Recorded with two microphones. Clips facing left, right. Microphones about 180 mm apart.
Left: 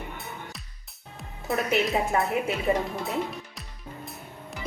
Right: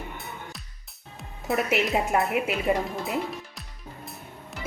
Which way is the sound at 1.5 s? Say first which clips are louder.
Right 1 dB; centre (ahead or behind).